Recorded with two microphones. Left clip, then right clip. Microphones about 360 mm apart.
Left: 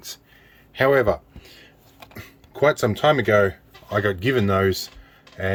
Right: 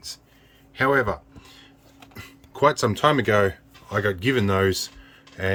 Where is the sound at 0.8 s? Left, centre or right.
Centre.